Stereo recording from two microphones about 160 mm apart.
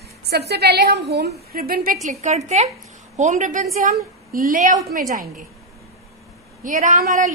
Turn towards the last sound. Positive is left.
turn(degrees=-55)  # may be behind; listen again after turning